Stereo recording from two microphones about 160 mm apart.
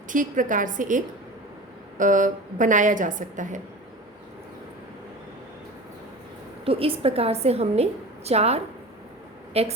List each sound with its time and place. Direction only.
0.1 s a woman's voice: 55° right (ahead or behind)
6.7 s a woman's voice: 35° right (ahead or behind)